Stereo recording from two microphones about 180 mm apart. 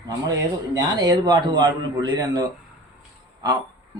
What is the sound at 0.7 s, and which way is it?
A man's voice, 20° right (ahead or behind).